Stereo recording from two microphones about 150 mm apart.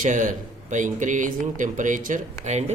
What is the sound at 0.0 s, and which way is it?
Speech, 60° right (ahead or behind).